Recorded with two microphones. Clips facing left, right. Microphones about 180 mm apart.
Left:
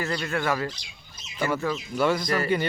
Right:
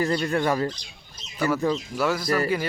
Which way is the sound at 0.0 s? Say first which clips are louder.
Right 4 dB; 35° right (ahead or behind).